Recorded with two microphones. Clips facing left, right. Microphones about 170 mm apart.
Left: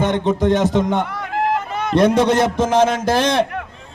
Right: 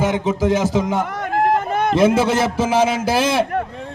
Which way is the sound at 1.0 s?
45° right (ahead or behind).